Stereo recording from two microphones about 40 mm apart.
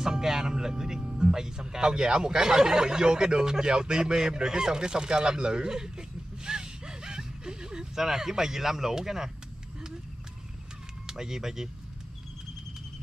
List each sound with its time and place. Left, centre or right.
0.0 s speech: centre
11.1 s speech: centre